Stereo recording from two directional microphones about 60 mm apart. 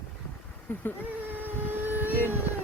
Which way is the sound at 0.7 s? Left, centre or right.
Left.